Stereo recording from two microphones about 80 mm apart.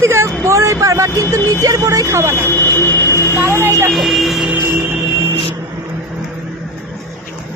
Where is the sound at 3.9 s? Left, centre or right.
Centre.